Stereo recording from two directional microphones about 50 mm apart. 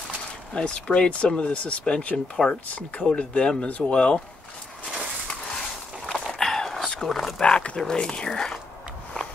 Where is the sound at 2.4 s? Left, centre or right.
Centre.